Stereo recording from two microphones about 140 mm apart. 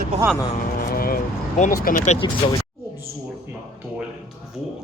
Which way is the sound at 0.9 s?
90° left.